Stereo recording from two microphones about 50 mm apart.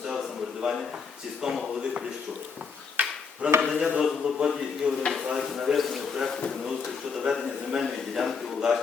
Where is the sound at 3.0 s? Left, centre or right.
Right.